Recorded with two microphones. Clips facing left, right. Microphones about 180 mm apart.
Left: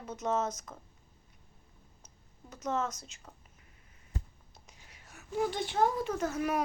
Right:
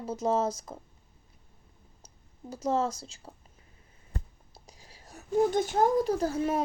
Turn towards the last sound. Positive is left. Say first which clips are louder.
# right 4 dB
turn(degrees=-30)  # may be behind; listen again after turning